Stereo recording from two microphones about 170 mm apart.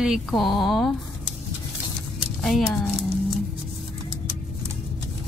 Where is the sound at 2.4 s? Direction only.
Centre (ahead or behind).